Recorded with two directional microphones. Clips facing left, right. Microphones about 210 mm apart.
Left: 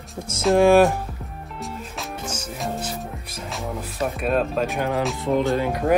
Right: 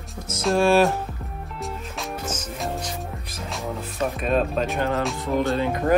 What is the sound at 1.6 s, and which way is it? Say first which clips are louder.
Music: even; centre (ahead or behind).